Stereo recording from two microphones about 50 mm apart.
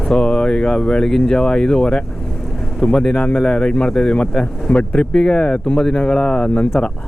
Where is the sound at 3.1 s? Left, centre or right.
Left.